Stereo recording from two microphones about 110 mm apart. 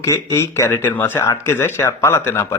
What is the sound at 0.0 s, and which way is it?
Speech, 30° left (ahead or behind).